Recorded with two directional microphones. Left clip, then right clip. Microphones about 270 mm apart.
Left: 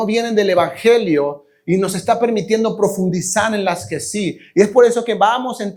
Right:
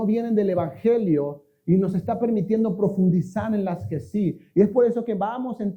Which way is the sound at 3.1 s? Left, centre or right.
Centre.